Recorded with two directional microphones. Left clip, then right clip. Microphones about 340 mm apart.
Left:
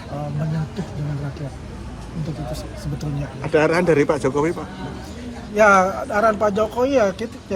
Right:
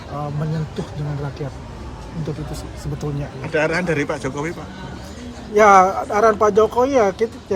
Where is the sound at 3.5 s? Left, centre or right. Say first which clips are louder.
Left 3 dB; centre.